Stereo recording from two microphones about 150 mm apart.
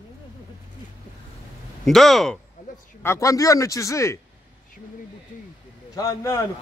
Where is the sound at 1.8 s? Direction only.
Centre (ahead or behind).